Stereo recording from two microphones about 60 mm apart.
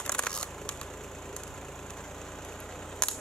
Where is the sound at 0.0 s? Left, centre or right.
Centre.